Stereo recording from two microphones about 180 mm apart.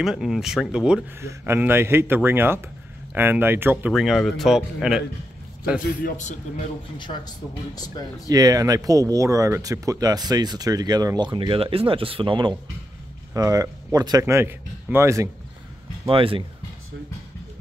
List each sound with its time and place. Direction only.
0.0 s a man's voice: centre (ahead or behind)
6.0 s speech: 40° left (ahead or behind)
7.0 s speech: 25° left (ahead or behind)
8.3 s a man's voice: 20° right (ahead or behind)
16.1 s speech: 30° right (ahead or behind)